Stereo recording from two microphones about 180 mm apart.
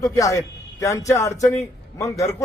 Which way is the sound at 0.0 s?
20° left (ahead or behind).